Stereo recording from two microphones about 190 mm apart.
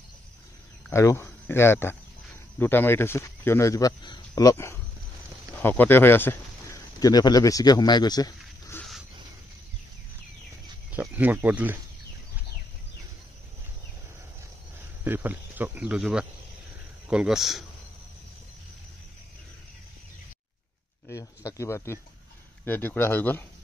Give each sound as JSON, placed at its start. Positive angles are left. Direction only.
{"t": 0.8, "sound": "speech", "side_deg": 15}
{"t": 10.9, "sound": "speech", "side_deg": -10}
{"t": 15.0, "sound": "speech", "side_deg": -10}
{"t": 21.1, "sound": "speech", "side_deg": 15}